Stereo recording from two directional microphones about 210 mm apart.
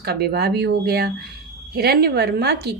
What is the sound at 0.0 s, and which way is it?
A woman's voice, 50° right (ahead or behind).